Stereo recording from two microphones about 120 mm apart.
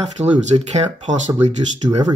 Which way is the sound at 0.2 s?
70° right (ahead or behind).